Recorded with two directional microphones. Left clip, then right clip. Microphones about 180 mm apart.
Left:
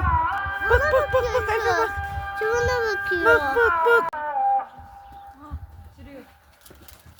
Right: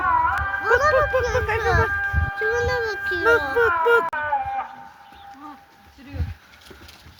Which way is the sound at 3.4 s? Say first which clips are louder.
Even; 75° left (ahead or behind).